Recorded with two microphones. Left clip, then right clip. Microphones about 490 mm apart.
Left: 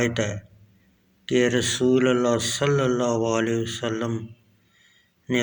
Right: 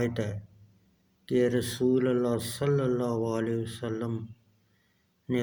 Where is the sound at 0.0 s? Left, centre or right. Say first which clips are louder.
Left 7 dB; right.